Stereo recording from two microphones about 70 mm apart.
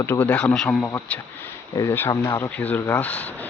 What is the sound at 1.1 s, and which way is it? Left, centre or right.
Speech, centre.